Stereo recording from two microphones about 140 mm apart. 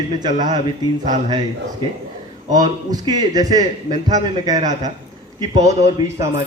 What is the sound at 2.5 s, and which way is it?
A man's voice, 30° right (ahead or behind).